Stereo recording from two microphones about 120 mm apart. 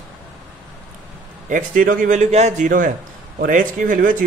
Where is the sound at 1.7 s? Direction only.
90° right.